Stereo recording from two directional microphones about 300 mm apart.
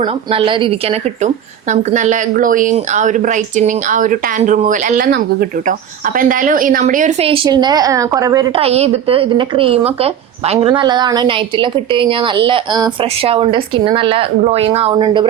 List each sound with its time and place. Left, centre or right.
0.0 s a woman's voice: centre